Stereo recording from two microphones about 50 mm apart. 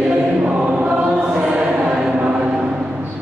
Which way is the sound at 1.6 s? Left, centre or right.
Centre.